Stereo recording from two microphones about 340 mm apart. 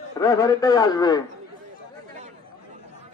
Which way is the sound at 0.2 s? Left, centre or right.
Centre.